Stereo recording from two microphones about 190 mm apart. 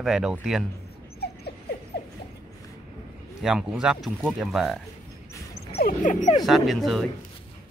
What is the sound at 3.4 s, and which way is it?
Speech, 5° right (ahead or behind).